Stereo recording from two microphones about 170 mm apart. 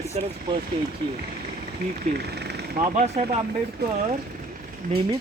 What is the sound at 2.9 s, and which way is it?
Speech, 40° right (ahead or behind).